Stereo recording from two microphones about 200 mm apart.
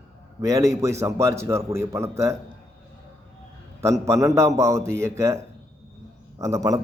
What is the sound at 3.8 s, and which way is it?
A man's voice, 15° right (ahead or behind).